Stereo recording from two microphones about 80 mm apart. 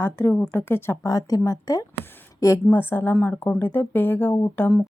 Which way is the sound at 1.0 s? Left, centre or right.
Left.